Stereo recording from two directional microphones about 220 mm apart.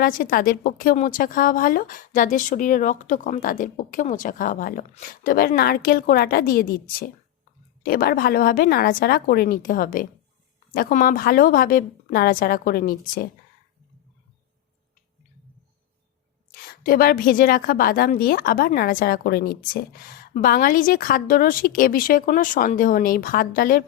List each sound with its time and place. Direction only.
0.0 s a woman's voice: 40° left (ahead or behind)
16.5 s a woman's voice: 40° left (ahead or behind)